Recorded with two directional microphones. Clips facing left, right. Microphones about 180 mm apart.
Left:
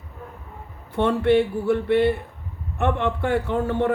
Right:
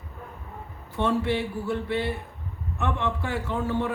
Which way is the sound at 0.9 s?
60° left (ahead or behind).